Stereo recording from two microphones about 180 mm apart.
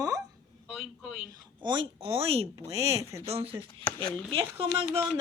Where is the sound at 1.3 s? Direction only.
25° right (ahead or behind).